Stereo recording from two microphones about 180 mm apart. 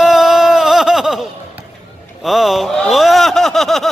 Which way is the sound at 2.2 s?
Centre (ahead or behind).